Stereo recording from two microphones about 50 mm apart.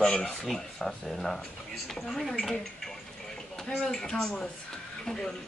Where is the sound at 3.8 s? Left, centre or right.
Centre.